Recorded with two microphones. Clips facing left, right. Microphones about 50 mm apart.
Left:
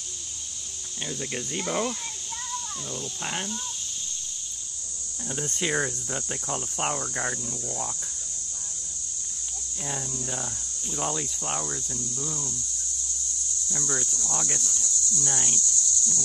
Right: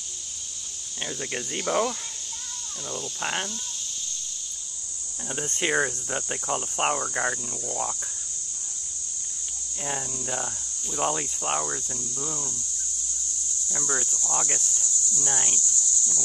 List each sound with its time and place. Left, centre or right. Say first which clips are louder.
1.0 s cricket: right 1 dB; centre
3.2 s cricket: right 4 dB; centre
5.3 s cricket: right 2 dB; right
9.8 s cricket: right 2 dB; centre
11.1 s cricket: right 3 dB; right
13.7 s cricket: right 2 dB; centre